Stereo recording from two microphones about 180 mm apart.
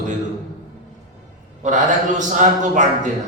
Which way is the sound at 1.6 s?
45° right (ahead or behind).